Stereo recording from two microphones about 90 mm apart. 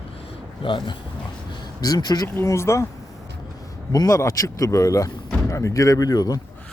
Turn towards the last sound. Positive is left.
turn(degrees=45)  # may be behind; listen again after turning